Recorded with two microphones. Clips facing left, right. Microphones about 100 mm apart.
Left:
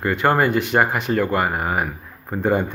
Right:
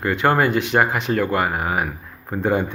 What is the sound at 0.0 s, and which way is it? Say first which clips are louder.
Speech: even; 5° left (ahead or behind).